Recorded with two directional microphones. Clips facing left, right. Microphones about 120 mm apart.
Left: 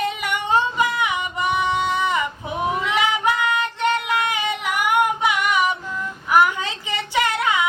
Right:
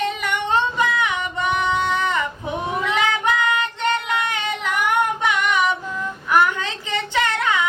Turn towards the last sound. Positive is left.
turn(degrees=10)  # may be behind; listen again after turning